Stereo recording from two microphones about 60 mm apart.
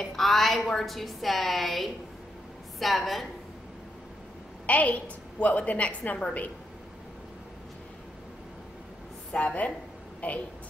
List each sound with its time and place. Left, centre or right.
0.0 s a woman's voice: centre
4.6 s a woman's voice: left
9.3 s a woman's voice: left